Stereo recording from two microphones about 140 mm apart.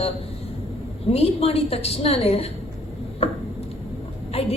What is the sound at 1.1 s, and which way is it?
A woman's voice, 45° left (ahead or behind).